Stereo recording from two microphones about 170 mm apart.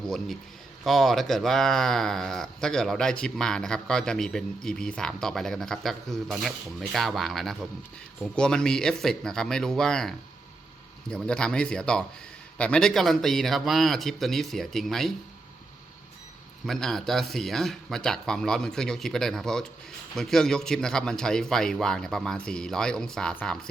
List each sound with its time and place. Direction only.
0.9 s speech: centre (ahead or behind)
16.6 s speech: centre (ahead or behind)